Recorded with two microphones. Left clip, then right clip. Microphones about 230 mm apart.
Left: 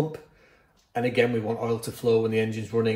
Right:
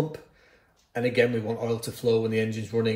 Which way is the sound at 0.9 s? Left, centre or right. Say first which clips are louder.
Even; centre.